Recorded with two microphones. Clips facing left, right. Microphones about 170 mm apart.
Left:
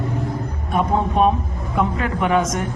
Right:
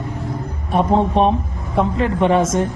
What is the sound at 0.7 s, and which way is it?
A woman's voice, 30° right (ahead or behind).